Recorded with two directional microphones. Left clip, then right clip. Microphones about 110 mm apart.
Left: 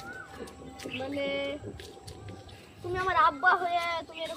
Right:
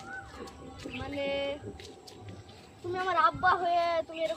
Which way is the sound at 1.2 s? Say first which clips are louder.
Right 1 dB; 35° right (ahead or behind).